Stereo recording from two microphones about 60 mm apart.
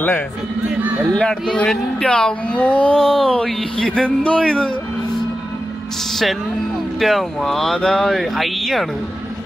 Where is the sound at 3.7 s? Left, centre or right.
Centre.